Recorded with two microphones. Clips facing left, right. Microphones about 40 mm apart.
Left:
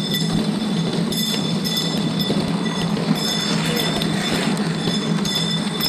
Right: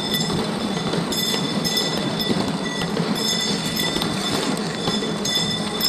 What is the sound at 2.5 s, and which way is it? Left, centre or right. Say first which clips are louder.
Train: left 2 dB; centre.